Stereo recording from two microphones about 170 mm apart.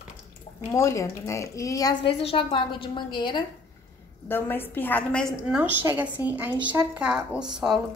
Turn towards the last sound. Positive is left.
turn(degrees=-5)  # may be behind; listen again after turning